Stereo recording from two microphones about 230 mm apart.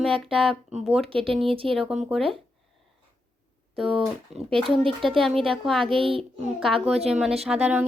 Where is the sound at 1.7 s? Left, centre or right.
Centre.